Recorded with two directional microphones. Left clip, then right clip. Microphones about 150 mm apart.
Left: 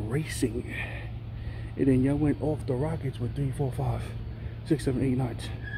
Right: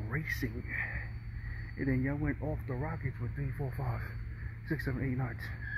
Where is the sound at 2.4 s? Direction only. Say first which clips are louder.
Left 10 dB; 5° left (ahead or behind).